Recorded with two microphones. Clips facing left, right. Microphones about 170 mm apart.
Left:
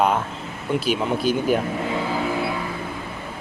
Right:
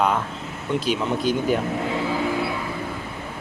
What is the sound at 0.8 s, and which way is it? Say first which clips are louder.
Speech: left 1 dB; 10° left (ahead or behind).